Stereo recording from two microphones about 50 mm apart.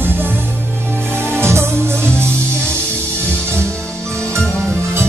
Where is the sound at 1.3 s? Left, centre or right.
Right.